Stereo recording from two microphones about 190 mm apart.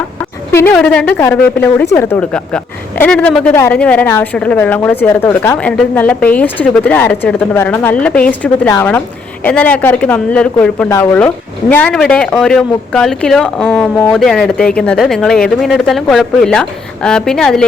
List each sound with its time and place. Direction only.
0.5 s speech: 10° left (ahead or behind)